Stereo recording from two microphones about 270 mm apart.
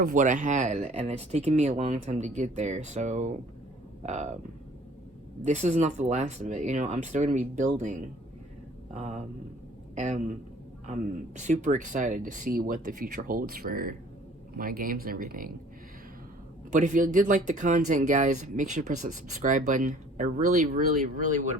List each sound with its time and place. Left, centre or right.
0.0 s speech: right
5.4 s speech: right
8.9 s a man's voice: right
11.3 s speech: right
16.7 s speech: right